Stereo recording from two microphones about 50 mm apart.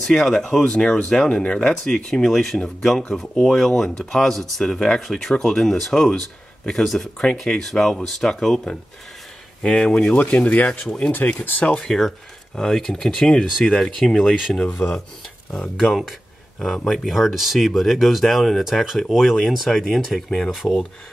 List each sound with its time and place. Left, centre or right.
0.0 s speech: centre
2.0 s speech: centre
10.2 s speech: left
11.8 s speech: centre
14.6 s speech: left
15.8 s speech: centre